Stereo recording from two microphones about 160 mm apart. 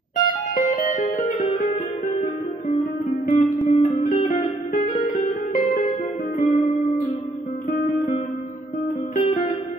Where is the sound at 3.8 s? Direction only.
40° left (ahead or behind).